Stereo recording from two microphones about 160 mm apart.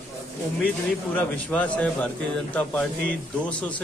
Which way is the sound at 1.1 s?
10° left (ahead or behind).